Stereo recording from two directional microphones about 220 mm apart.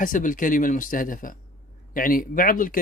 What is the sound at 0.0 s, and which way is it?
A man's voice, 35° left (ahead or behind).